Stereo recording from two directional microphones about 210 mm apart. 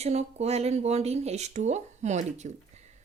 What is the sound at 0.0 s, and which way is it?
Speech, 30° right (ahead or behind).